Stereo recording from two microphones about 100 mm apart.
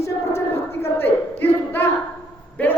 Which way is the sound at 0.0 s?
25° left (ahead or behind).